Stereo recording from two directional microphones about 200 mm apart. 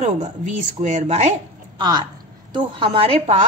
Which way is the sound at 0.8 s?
35° right (ahead or behind).